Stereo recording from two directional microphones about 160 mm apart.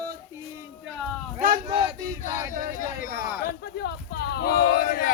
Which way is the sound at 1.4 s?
60° right (ahead or behind).